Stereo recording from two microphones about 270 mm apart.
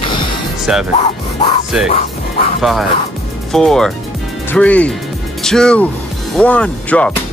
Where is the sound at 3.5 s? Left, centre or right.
Centre.